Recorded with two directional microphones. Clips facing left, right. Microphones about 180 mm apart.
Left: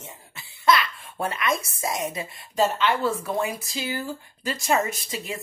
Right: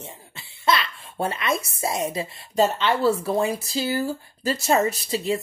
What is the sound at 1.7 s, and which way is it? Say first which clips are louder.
A woman's voice: right 3 dB; 30° right (ahead or behind).